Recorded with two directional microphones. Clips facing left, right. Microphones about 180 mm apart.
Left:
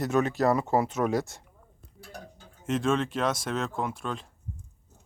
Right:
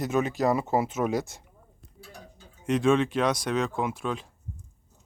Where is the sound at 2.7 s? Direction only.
Centre (ahead or behind).